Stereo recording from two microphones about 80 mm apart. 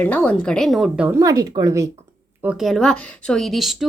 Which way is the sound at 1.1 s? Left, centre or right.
Right.